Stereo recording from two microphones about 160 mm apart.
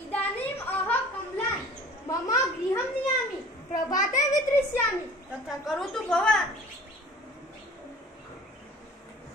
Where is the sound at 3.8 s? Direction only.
20° left (ahead or behind).